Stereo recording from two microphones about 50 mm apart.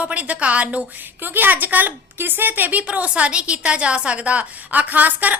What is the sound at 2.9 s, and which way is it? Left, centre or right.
A woman's voice, right.